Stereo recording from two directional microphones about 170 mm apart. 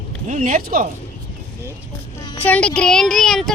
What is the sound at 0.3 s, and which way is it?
Speech, 50° right (ahead or behind).